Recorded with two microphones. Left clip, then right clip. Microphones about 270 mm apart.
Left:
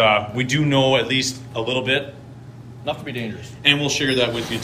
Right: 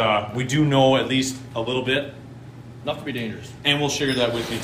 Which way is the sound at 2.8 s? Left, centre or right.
Left.